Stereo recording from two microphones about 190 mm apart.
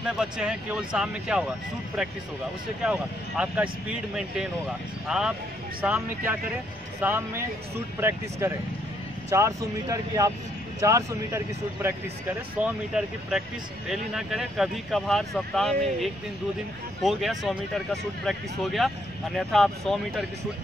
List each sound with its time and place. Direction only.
0.2 s speech: 5° right (ahead or behind)
2.8 s speech: 5° right (ahead or behind)